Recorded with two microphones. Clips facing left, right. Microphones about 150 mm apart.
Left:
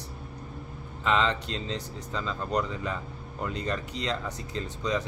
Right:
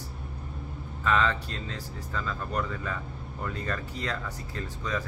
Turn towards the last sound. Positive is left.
turn(degrees=20)  # may be behind; listen again after turning